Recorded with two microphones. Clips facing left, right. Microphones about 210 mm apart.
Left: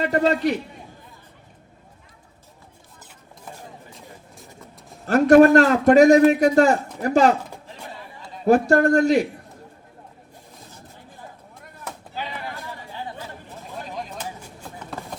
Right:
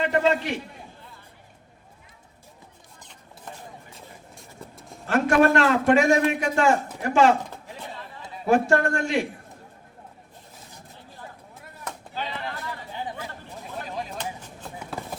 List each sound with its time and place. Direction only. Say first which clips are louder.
0.0 s a man's voice: left 3 dB; 40° left (ahead or behind)
3.0 s chopping: left 1 dB; 5° left (ahead or behind)
3.9 s vehicle: left 2 dB; centre (ahead or behind)
5.0 s a man's voice: left 7 dB; 40° left (ahead or behind)
8.4 s a man's voice: left 5 dB; 40° left (ahead or behind)
12.1 s a sound: even; 10° left (ahead or behind)
12.9 s chatter: even; 15° right (ahead or behind)
13.9 s a sound: right 1 dB; centre (ahead or behind)